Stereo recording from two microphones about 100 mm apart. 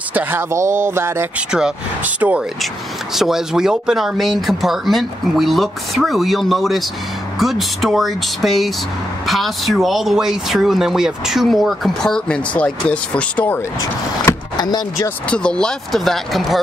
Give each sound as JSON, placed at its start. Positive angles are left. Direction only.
{"t": 0.1, "sound": "speech", "side_deg": -20}
{"t": 1.5, "sound": "speech", "side_deg": -10}
{"t": 3.2, "sound": "speech", "side_deg": -5}
{"t": 15.2, "sound": "speech", "side_deg": 10}